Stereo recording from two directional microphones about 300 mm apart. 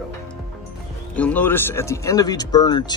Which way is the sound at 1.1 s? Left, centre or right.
Centre.